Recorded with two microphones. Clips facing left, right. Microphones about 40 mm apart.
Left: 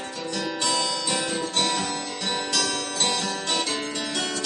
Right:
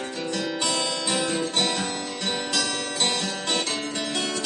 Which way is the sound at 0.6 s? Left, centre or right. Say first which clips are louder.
Left 3 dB; centre.